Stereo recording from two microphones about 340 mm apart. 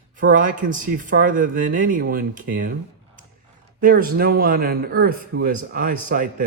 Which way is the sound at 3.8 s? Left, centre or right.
Right.